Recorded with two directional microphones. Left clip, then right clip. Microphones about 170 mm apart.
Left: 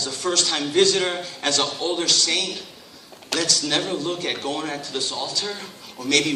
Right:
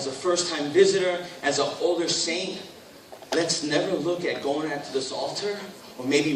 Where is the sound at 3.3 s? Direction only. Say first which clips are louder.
Even; 35° left (ahead or behind).